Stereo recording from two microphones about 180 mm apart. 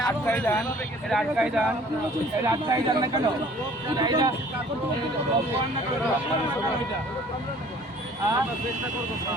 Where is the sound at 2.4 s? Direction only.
20° right (ahead or behind).